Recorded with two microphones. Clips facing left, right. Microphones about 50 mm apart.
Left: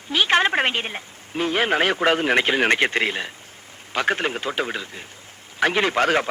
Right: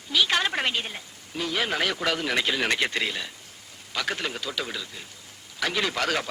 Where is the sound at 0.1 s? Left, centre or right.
Left.